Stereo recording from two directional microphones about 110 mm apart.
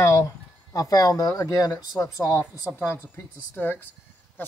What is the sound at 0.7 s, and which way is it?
Speech, 35° left (ahead or behind).